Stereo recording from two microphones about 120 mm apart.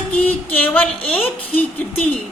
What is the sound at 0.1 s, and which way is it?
Music, 15° left (ahead or behind).